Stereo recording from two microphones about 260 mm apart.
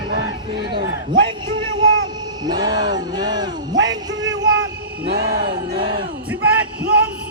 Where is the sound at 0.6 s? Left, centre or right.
Right.